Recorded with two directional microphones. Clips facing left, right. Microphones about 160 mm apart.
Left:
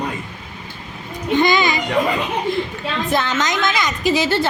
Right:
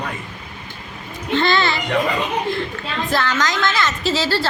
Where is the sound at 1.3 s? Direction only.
15° left (ahead or behind).